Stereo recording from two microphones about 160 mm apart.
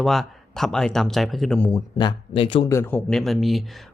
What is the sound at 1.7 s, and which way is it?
Speech, 30° left (ahead or behind).